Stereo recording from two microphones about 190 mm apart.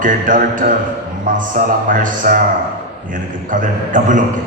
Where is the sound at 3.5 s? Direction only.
40° right (ahead or behind).